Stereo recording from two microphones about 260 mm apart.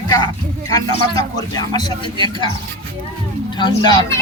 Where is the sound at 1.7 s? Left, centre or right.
Centre.